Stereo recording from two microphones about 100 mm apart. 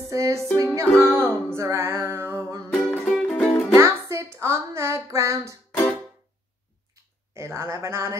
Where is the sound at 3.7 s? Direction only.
30° right (ahead or behind).